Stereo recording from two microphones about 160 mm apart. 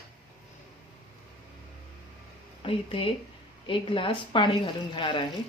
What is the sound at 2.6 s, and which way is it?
A woman's voice, 35° left (ahead or behind).